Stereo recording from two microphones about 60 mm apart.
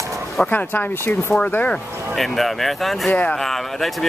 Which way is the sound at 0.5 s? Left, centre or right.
Left.